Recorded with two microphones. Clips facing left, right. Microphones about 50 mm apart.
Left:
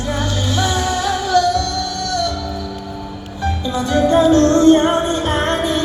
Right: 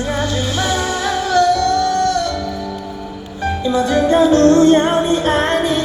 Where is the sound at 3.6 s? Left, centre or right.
Right.